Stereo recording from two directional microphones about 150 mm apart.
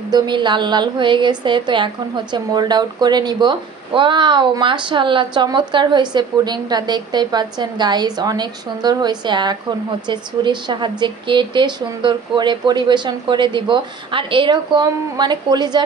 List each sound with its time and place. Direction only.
0.1 s a woman's voice: 30° right (ahead or behind)